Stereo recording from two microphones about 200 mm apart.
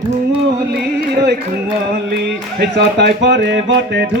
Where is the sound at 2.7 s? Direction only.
60° right (ahead or behind).